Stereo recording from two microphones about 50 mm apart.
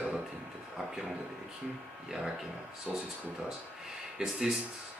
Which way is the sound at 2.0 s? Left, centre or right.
Centre.